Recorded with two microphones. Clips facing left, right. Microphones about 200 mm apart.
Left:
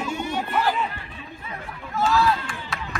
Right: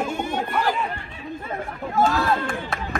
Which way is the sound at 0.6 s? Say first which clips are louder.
Even; 50° right (ahead or behind).